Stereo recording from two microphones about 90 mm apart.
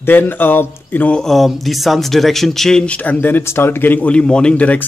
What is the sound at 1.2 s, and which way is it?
Speech, centre (ahead or behind).